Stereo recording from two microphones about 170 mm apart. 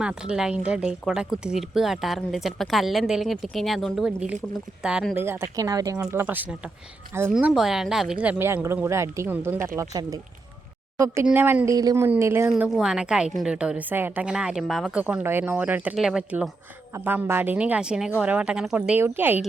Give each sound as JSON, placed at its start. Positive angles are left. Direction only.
{"t": 0.0, "sound": "a woman's voice", "side_deg": -5}
{"t": 12.5, "sound": "a woman's voice", "side_deg": -5}